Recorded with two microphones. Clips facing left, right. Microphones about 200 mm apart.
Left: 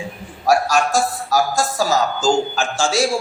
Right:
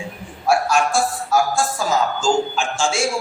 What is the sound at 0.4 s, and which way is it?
A woman's voice, 40° left (ahead or behind).